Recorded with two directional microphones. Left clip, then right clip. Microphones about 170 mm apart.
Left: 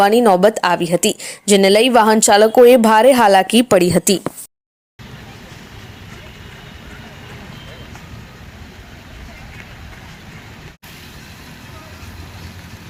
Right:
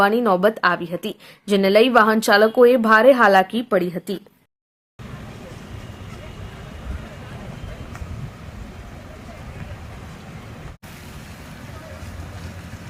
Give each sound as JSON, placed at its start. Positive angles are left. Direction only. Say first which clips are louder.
{"t": 0.0, "sound": "a woman's voice", "louder": "left 6 dB", "side_deg": 25}